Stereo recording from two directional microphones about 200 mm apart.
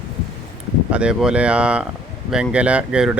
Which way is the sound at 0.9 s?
5° right (ahead or behind).